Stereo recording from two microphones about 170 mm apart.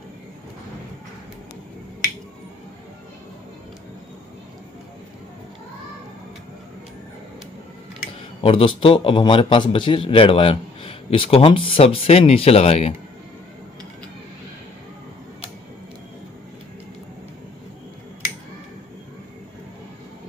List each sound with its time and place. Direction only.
8.4 s a man's voice: 35° left (ahead or behind)